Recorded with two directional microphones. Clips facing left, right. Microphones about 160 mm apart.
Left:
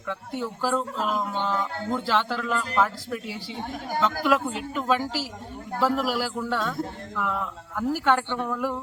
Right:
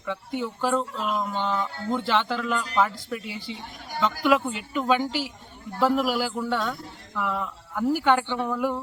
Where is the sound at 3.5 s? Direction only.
50° left (ahead or behind).